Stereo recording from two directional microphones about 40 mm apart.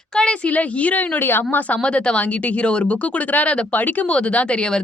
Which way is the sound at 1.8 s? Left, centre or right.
Left.